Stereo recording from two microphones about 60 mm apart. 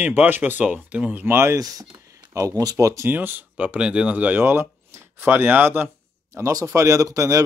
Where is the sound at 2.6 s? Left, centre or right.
Right.